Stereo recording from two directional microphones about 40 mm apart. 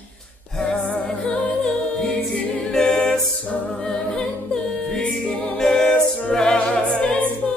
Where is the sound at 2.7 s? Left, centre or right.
Centre.